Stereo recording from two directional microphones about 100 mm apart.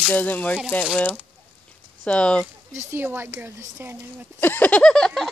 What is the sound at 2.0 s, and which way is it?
Speech, 10° left (ahead or behind).